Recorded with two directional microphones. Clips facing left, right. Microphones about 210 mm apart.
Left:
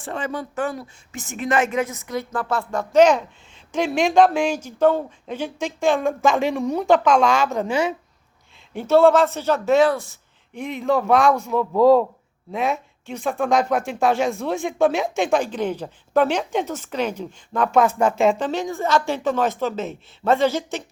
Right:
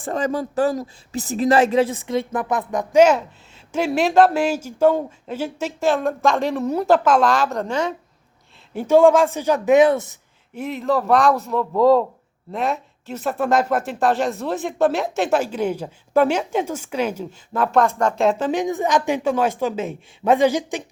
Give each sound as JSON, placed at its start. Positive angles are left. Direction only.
{"t": 0.0, "sound": "speech", "side_deg": -40}
{"t": 8.9, "sound": "speech", "side_deg": -10}
{"t": 10.5, "sound": "speech", "side_deg": -5}